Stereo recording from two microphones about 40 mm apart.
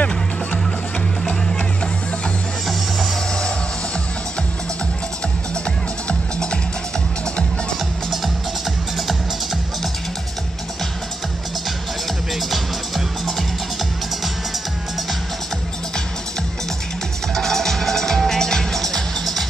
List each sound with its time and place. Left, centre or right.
6.0 s music: left
12.4 s music: centre
17.3 s music: centre